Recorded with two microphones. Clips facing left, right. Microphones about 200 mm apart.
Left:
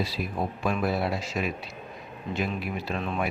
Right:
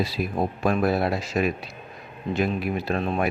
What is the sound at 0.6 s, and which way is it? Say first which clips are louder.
Speech: right 5 dB; 45° right (ahead or behind).